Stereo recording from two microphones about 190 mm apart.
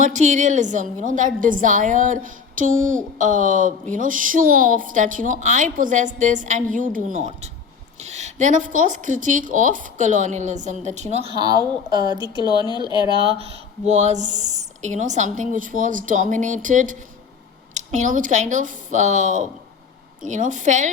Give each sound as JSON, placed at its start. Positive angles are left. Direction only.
{"t": 0.0, "sound": "a woman's voice", "side_deg": -40}
{"t": 11.3, "sound": "a woman's voice", "side_deg": -20}
{"t": 12.2, "sound": "speech", "side_deg": 20}
{"t": 13.1, "sound": "speech", "side_deg": -30}